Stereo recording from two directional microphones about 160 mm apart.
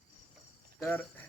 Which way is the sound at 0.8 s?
15° left (ahead or behind).